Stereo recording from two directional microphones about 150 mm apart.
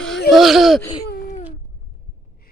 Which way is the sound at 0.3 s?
Centre (ahead or behind).